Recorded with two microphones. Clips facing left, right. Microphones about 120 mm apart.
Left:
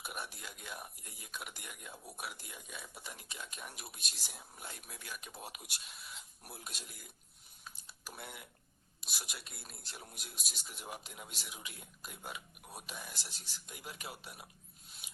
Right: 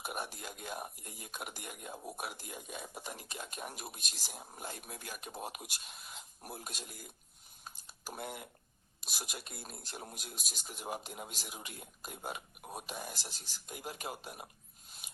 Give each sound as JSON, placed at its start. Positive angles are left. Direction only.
{"t": 0.0, "sound": "speech", "side_deg": -45}
{"t": 7.6, "sound": "typing", "side_deg": -40}
{"t": 9.0, "sound": "speech", "side_deg": -45}